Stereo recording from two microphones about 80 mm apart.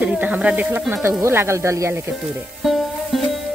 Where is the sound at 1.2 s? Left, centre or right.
Right.